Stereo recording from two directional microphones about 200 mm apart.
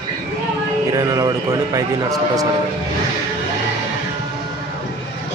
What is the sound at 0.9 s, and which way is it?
Speech, 20° right (ahead or behind).